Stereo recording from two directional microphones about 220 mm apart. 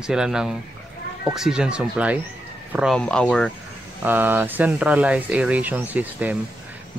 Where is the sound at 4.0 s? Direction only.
10° right (ahead or behind).